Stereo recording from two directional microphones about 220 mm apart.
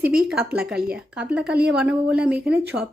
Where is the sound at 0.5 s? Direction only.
5° right (ahead or behind).